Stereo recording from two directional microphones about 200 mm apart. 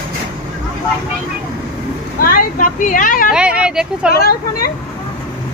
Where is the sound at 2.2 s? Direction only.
45° left (ahead or behind).